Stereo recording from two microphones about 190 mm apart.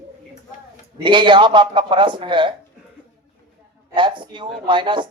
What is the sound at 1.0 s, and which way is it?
Speech, 25° right (ahead or behind).